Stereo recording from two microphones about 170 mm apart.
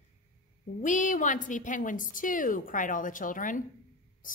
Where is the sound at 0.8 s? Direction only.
50° left (ahead or behind).